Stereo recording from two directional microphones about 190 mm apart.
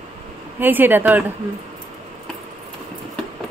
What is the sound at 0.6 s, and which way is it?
Speech, 10° right (ahead or behind).